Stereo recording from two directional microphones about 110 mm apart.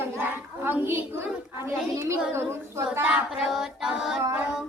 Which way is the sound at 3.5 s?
5° right (ahead or behind).